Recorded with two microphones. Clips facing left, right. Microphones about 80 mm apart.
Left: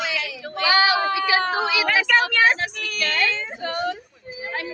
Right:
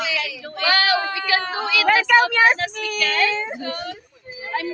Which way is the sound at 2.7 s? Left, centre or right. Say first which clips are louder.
Right 3 dB; centre.